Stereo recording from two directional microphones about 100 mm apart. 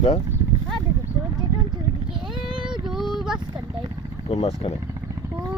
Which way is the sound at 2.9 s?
5° right (ahead or behind).